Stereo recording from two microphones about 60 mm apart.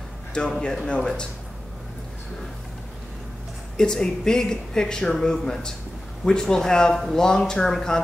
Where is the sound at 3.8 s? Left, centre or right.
Centre.